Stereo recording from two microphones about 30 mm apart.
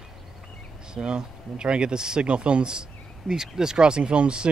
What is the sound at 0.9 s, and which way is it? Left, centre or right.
A man's voice, right.